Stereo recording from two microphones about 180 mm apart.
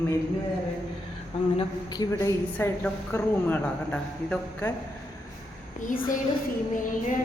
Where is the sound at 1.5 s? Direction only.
25° left (ahead or behind).